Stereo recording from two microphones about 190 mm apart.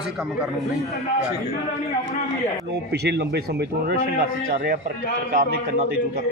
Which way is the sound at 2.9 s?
60° right (ahead or behind).